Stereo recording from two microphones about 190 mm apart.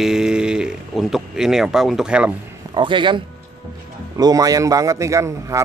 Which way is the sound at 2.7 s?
25° right (ahead or behind).